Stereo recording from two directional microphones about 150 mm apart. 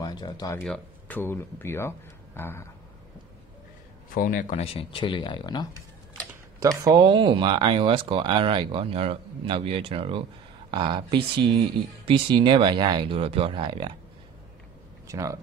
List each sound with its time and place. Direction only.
0.0 s speech: 25° left (ahead or behind)
0.7 s speech: 10° left (ahead or behind)
4.1 s a man's voice: 65° left (ahead or behind)
4.7 s speech: 35° left (ahead or behind)
6.6 s speech: 25° right (ahead or behind)
7.0 s speech: 35° right (ahead or behind)
15.0 s speech: 20° right (ahead or behind)